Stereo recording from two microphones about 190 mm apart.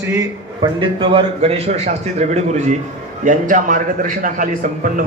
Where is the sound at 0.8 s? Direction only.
25° right (ahead or behind).